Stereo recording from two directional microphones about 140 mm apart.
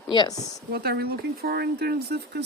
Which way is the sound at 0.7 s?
90° right.